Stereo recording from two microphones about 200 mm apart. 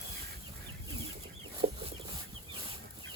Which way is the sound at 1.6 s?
35° right (ahead or behind).